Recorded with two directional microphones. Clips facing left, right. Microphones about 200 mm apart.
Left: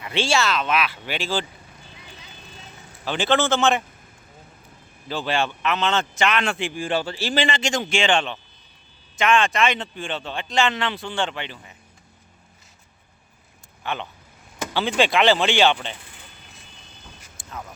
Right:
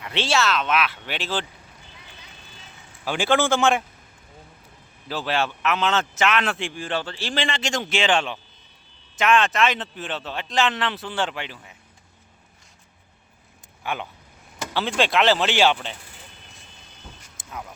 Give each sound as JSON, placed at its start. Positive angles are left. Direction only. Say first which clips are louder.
{"t": 0.0, "sound": "a man's voice", "louder": "left 1 dB", "side_deg": 0}
{"t": 3.0, "sound": "a man's voice", "louder": "even", "side_deg": -10}
{"t": 5.0, "sound": "a man's voice", "louder": "left 1 dB", "side_deg": -5}
{"t": 13.8, "sound": "a man's voice", "louder": "even", "side_deg": -10}
{"t": 17.4, "sound": "a sound", "louder": "even", "side_deg": -20}